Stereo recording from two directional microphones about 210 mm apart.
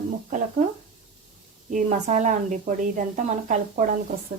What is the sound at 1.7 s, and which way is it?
A woman's voice, 35° right (ahead or behind).